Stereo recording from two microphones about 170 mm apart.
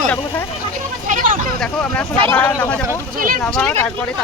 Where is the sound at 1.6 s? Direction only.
10° left (ahead or behind).